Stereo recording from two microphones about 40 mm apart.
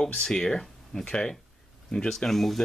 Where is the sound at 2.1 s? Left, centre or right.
Centre.